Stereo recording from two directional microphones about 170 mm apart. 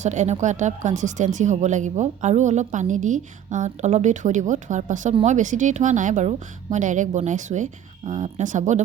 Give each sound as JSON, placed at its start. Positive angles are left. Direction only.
{"t": 0.0, "sound": "speech", "side_deg": -45}